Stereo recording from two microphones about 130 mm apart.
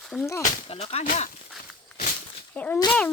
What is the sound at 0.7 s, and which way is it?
Speech, 50° left (ahead or behind).